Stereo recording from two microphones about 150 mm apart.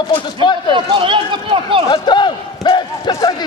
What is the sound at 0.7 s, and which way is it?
Speech, 35° right (ahead or behind).